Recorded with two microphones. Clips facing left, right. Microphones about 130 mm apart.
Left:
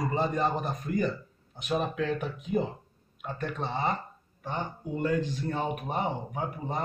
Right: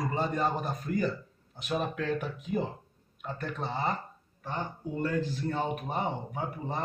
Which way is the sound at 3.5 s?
20° left (ahead or behind).